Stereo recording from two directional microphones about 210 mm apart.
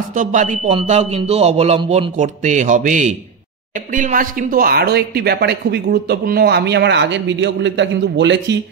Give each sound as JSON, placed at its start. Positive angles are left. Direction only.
{"t": 0.1, "sound": "speech", "side_deg": -40}